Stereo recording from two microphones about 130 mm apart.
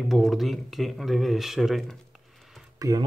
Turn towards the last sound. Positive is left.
turn(degrees=-25)  # may be behind; listen again after turning